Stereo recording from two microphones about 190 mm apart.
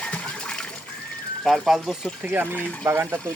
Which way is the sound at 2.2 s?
10° right (ahead or behind).